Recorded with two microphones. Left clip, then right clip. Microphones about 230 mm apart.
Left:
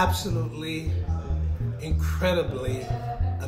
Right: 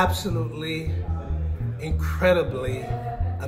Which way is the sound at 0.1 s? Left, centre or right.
Centre.